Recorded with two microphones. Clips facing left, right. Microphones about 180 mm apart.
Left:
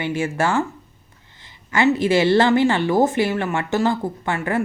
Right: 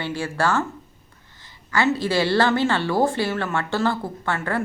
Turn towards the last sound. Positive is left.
turn(degrees=15)  # may be behind; listen again after turning